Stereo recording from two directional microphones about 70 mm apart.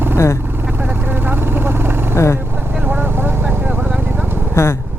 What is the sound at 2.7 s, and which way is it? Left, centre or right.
Vehicle, right.